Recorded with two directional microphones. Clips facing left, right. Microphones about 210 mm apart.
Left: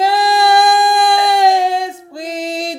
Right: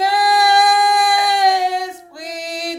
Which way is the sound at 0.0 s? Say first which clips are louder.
Left 3 dB; 25° left (ahead or behind).